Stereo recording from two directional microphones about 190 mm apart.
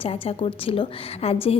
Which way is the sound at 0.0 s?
30° left (ahead or behind).